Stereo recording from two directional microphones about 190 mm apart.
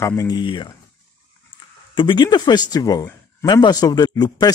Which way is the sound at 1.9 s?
25° left (ahead or behind).